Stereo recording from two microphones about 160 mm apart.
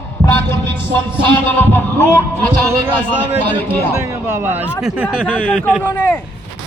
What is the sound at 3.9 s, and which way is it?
Speech, 15° right (ahead or behind).